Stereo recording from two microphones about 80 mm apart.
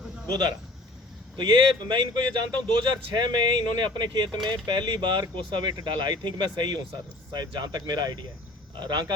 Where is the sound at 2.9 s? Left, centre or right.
Right.